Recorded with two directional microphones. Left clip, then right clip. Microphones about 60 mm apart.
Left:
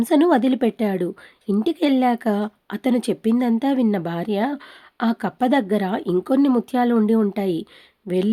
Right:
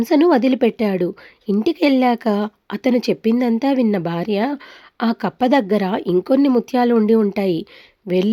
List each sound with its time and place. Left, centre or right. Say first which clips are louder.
0.0 s a woman's voice: right 2 dB; right
6.2 s speech: right 2 dB; right
7.3 s a woman's voice: right 4 dB; right
8.1 s speech: right 4 dB; right